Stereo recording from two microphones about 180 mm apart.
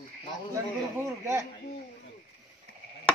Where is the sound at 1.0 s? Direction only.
15° right (ahead or behind).